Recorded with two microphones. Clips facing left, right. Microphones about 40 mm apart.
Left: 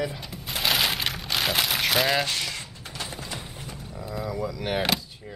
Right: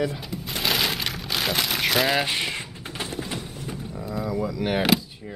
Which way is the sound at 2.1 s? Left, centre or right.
Right.